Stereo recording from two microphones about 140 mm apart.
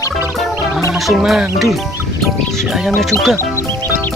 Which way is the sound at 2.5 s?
Centre (ahead or behind).